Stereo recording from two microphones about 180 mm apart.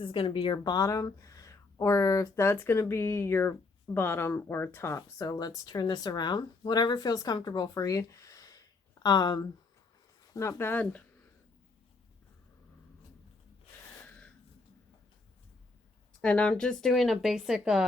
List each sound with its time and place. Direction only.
0.0 s a woman's voice: 30° left (ahead or behind); by 11.0 s 10° left (ahead or behind)
16.2 s speech: 5° left (ahead or behind)